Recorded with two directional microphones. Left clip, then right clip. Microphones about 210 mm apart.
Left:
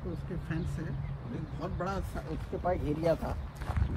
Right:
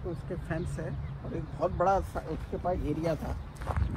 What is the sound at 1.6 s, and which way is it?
Speech, 35° right (ahead or behind).